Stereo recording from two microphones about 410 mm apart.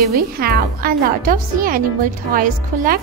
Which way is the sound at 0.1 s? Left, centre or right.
Right.